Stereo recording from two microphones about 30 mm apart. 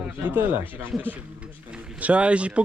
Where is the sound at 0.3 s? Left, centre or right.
Right.